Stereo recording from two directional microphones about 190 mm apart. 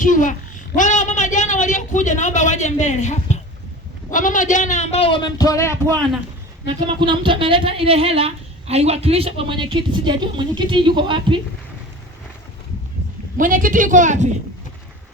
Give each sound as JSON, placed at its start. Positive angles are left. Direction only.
{"t": 0.0, "sound": "a child's voice", "side_deg": 45}
{"t": 6.7, "sound": "a woman's voice", "side_deg": -25}
{"t": 13.3, "sound": "speech", "side_deg": -45}